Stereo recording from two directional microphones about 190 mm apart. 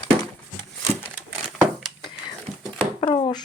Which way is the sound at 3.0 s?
25° left (ahead or behind).